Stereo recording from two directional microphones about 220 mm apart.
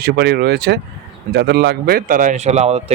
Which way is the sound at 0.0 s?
50° right (ahead or behind).